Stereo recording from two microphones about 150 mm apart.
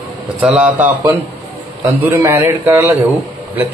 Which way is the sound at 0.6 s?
10° right (ahead or behind).